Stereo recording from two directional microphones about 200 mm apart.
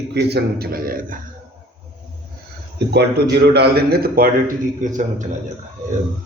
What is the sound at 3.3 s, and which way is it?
A man's voice, 55° right (ahead or behind).